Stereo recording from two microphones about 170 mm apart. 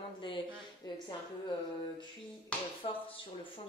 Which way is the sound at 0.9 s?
25° left (ahead or behind).